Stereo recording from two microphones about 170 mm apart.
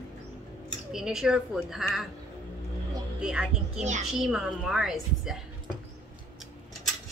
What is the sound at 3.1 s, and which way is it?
Speech, 5° right (ahead or behind).